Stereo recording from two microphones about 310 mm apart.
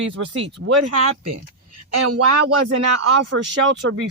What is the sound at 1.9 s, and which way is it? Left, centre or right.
Speech, right.